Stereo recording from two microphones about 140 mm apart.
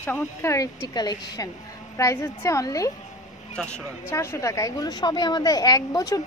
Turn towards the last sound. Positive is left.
turn(degrees=25)  # may be behind; listen again after turning